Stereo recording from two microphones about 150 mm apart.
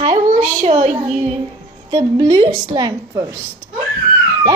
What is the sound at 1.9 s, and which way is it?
A woman's voice, 30° right (ahead or behind).